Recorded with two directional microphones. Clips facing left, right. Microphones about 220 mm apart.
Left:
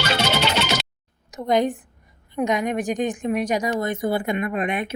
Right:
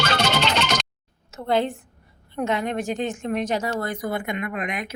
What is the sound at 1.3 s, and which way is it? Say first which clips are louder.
A woman's voice: left 2 dB; 15° left (ahead or behind).